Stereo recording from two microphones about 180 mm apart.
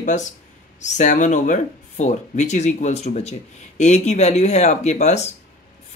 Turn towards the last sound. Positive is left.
turn(degrees=40)  # may be behind; listen again after turning